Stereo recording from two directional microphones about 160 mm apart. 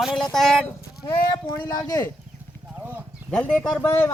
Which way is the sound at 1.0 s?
30° left (ahead or behind).